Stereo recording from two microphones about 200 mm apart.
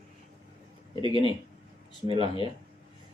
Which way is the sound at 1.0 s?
25° left (ahead or behind).